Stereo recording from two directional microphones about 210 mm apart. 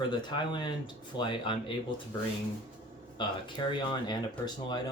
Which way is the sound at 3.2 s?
20° left (ahead or behind).